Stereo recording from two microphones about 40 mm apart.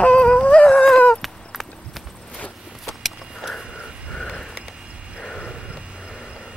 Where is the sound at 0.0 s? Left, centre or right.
Left.